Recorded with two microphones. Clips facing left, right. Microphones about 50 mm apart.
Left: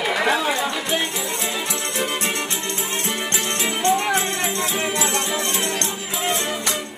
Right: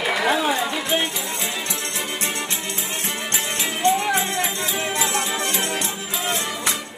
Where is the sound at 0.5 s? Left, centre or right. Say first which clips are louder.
Even; centre.